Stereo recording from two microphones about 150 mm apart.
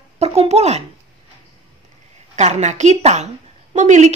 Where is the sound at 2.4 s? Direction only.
50° right (ahead or behind).